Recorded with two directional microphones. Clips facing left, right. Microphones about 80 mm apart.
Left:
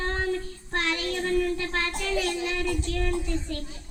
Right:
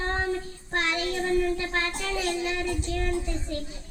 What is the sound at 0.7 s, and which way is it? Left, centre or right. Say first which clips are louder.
A child's voice: right 1 dB; right.